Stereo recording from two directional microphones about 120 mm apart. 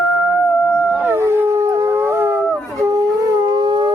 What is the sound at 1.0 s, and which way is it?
Howl, 20° right (ahead or behind).